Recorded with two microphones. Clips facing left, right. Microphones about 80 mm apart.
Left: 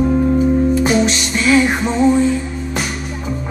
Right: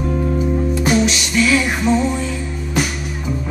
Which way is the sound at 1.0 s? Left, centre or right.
Left.